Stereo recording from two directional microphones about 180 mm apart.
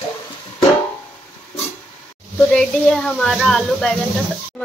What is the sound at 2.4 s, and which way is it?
Speech, 5° left (ahead or behind).